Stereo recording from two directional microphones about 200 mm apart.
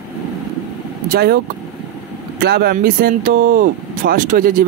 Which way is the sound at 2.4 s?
50° right (ahead or behind).